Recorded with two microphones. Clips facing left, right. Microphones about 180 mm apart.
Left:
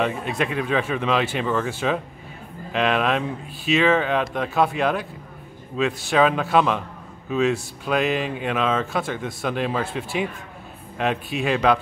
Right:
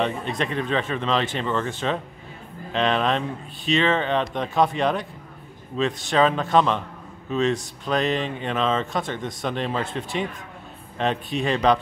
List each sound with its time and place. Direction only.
0.0 s speech: 5° left (ahead or behind)